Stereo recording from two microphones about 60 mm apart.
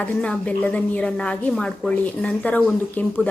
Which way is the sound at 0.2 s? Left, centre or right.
Left.